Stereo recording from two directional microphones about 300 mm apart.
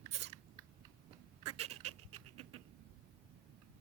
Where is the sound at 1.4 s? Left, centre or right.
Right.